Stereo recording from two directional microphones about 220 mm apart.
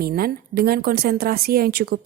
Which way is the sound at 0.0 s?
45° right (ahead or behind).